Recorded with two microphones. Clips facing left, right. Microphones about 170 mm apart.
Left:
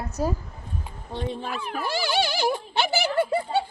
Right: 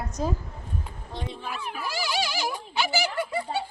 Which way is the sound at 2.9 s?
60° left (ahead or behind).